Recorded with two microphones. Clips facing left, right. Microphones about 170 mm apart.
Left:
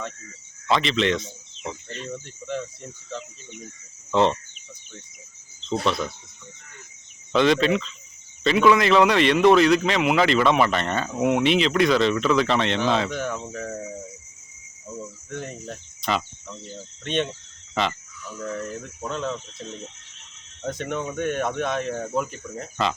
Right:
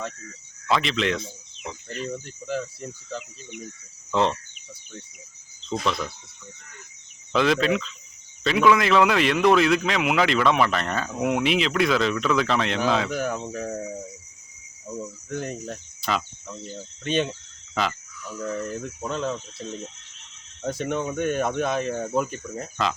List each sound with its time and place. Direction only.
0.7 s a man's voice: centre (ahead or behind)
4.1 s a man's voice: centre (ahead or behind)
5.8 s a man's voice: centre (ahead or behind)
7.3 s a man's voice: centre (ahead or behind)
14.9 s cricket: 35° right (ahead or behind)
15.3 s cricket: 5° right (ahead or behind)
17.0 s a man's voice: 5° right (ahead or behind)
18.3 s a man's voice: centre (ahead or behind)
20.7 s a man's voice: 5° right (ahead or behind)